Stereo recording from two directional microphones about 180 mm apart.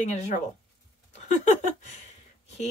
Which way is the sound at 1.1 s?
40° left (ahead or behind).